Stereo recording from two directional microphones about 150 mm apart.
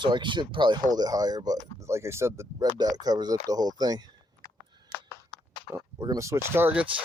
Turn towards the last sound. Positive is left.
turn(degrees=-10)  # may be behind; listen again after turning